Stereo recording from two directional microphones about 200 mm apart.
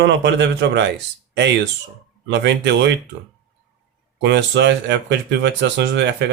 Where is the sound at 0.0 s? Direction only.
60° right (ahead or behind).